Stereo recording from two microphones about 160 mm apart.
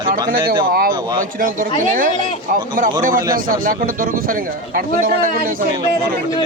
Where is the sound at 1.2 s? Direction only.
55° right (ahead or behind).